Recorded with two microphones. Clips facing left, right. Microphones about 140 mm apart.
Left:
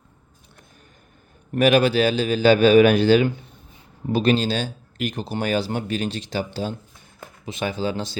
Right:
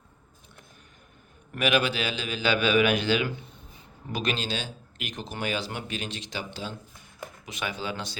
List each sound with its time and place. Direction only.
1.5 s speech: 40° left (ahead or behind)
7.4 s speech: 30° left (ahead or behind)